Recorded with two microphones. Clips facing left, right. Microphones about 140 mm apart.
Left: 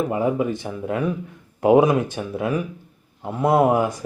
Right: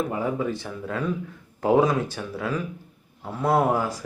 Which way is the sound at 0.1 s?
20° left (ahead or behind).